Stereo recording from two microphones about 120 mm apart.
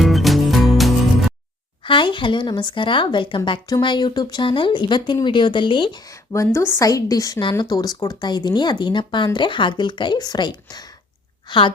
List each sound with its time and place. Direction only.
0.0 s music: centre (ahead or behind)
1.8 s speech: 40° left (ahead or behind)
6.1 s a woman's voice: 25° left (ahead or behind); by 11.7 s 40° left (ahead or behind)